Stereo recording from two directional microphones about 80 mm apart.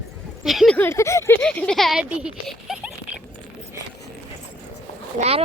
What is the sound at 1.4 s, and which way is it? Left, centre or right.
Speech, centre.